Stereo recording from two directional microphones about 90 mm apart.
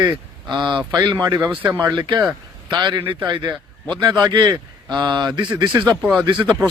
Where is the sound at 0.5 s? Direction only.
55° right (ahead or behind).